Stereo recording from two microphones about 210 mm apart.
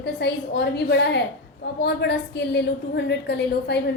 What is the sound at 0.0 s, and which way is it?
A woman's voice, 50° left (ahead or behind).